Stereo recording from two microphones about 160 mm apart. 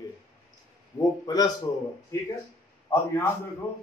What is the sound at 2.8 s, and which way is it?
Speech, 15° left (ahead or behind).